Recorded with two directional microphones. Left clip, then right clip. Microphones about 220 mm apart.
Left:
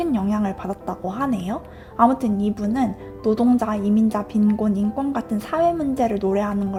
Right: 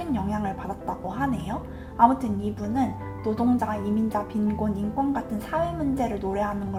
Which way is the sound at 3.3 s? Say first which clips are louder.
Left 6 dB; 45° left (ahead or behind).